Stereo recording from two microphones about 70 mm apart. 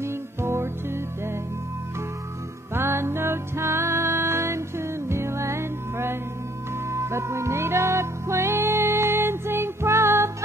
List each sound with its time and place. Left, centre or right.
0.0 s music: right
2.7 s music: right